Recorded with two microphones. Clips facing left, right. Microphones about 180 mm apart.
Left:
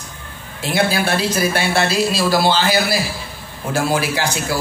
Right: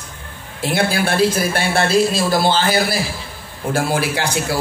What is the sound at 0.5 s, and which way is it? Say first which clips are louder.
A man's voice: even; 55° right (ahead or behind).